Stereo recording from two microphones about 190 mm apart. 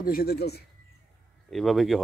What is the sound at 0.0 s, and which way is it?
Speech, 50° left (ahead or behind).